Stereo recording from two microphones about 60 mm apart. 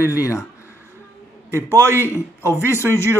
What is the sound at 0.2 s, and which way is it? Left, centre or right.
Speech, left.